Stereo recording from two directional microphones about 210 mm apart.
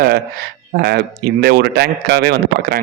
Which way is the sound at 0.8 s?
50° right (ahead or behind).